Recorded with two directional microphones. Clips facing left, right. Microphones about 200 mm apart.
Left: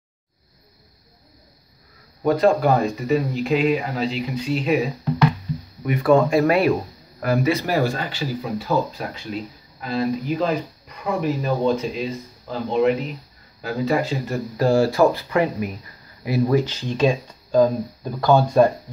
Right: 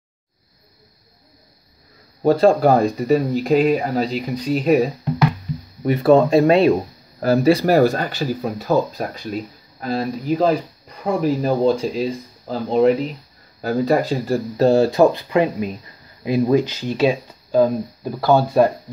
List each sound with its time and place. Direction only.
2.2 s speech: 30° right (ahead or behind)
5.9 s speech: 25° right (ahead or behind); by 18.6 s 5° right (ahead or behind)